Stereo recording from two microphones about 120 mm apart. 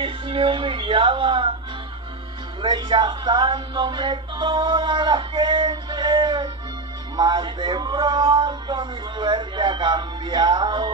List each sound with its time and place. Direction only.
0.0 s speech: 45° right (ahead or behind)
2.6 s speech: 35° right (ahead or behind)